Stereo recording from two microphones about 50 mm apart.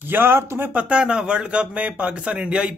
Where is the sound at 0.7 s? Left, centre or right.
Right.